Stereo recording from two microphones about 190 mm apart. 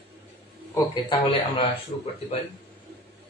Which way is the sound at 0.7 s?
25° left (ahead or behind).